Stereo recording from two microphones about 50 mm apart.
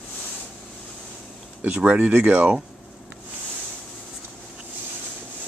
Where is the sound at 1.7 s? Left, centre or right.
Right.